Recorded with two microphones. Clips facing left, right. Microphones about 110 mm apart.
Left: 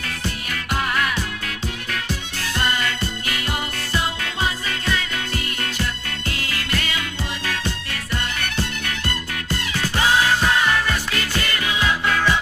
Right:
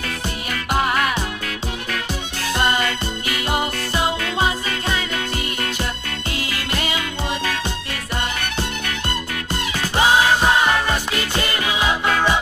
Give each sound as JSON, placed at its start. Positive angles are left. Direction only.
{"t": 0.7, "sound": "music", "side_deg": -20}
{"t": 2.4, "sound": "music", "side_deg": -20}
{"t": 6.3, "sound": "music", "side_deg": -20}